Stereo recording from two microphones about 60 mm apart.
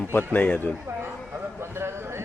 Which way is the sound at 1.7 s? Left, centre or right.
Right.